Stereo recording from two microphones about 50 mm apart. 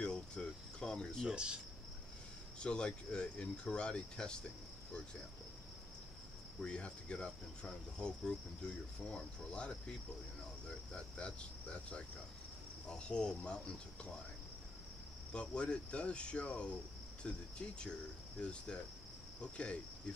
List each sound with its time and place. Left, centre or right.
0.0 s cricket: centre
1.3 s speech: centre
2.6 s speech: centre
6.6 s speech: left
11.1 s speech: left
15.5 s speech: left